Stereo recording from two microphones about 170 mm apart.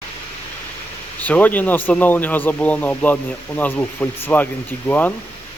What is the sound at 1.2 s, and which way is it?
Speech, 10° left (ahead or behind).